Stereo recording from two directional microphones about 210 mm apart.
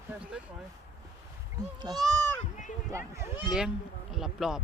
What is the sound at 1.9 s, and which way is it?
Speech, 20° right (ahead or behind).